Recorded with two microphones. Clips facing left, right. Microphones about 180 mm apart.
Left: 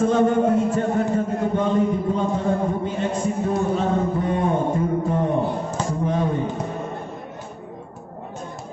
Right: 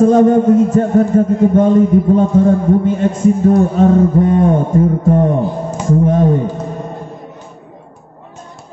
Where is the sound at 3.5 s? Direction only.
45° right (ahead or behind).